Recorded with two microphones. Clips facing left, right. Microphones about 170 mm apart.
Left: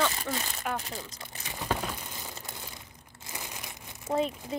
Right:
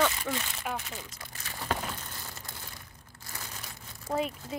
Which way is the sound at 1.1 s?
20° left (ahead or behind).